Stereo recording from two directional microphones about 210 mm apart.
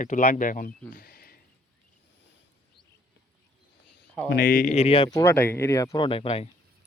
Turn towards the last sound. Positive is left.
turn(degrees=25)  # may be behind; listen again after turning